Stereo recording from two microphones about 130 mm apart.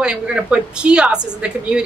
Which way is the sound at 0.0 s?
5° right (ahead or behind).